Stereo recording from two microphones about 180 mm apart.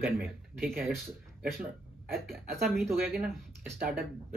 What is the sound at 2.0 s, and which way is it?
Speech, centre (ahead or behind).